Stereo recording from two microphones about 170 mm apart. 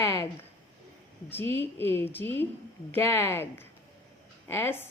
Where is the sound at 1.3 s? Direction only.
15° left (ahead or behind).